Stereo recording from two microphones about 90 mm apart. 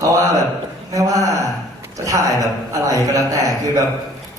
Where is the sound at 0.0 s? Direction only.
40° right (ahead or behind).